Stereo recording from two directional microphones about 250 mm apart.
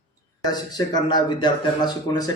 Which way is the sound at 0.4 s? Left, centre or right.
Centre.